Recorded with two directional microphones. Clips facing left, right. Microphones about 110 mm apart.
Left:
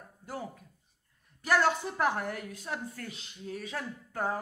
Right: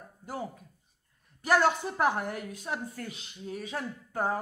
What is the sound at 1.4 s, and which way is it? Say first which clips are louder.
A woman's voice: right 2 dB; 20° right (ahead or behind).